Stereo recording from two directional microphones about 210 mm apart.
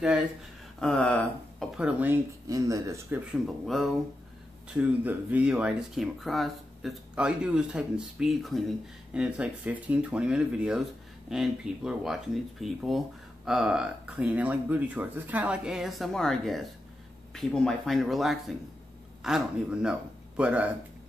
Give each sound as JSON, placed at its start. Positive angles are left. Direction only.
{"t": 0.7, "sound": "speech", "side_deg": 5}
{"t": 1.8, "sound": "speech", "side_deg": -5}
{"t": 3.4, "sound": "a man's voice", "side_deg": 0}